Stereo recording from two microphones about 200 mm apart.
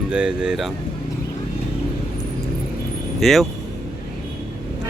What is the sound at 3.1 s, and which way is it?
Speech, centre (ahead or behind).